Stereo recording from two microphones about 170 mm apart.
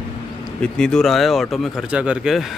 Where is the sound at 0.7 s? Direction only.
5° left (ahead or behind).